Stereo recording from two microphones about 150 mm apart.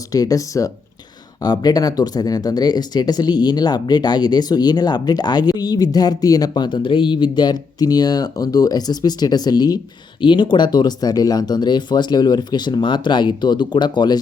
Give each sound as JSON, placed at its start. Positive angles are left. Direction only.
{"t": 0.1, "sound": "speech", "side_deg": 25}